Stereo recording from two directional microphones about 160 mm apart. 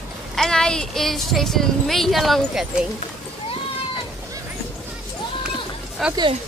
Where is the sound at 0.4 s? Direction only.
5° left (ahead or behind).